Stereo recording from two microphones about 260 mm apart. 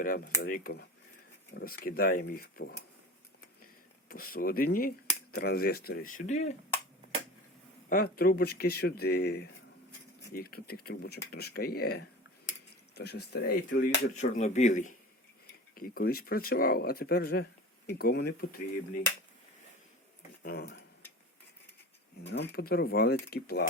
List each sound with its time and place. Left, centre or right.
0.0 s speech: left
4.1 s speech: left
7.9 s speech: left
13.8 s speech: left
20.4 s speech: left
22.5 s speech: left